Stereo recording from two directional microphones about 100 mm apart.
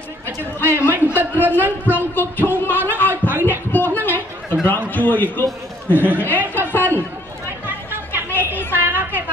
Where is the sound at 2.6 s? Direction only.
20° left (ahead or behind).